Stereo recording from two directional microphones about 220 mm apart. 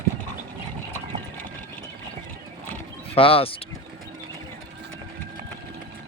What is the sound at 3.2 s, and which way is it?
Speech, 25° left (ahead or behind).